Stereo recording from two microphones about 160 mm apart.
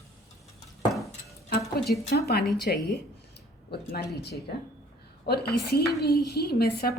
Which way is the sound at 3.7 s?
80° left.